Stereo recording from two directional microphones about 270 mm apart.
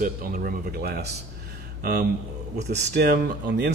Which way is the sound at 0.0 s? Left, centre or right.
Right.